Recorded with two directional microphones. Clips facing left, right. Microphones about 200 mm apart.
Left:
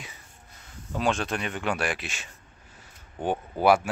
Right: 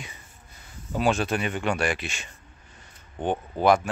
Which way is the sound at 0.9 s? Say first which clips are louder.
Right 3 dB; 5° right (ahead or behind).